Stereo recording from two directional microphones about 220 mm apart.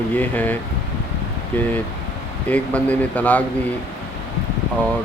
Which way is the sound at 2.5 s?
5° left (ahead or behind).